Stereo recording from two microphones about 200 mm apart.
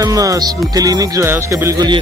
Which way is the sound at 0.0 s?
15° right (ahead or behind).